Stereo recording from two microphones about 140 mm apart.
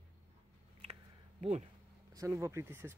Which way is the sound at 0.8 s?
50° right (ahead or behind).